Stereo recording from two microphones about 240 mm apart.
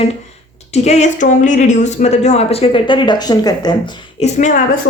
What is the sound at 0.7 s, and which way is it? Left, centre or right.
Speech, left.